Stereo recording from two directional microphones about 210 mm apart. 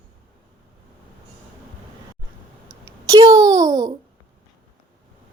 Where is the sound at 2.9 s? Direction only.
15° right (ahead or behind).